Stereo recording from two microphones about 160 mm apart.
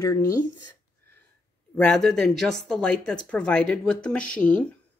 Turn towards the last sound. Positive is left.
turn(degrees=10)  # may be behind; listen again after turning